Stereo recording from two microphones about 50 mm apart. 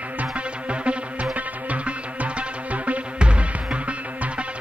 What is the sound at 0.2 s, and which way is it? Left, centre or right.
Music, right.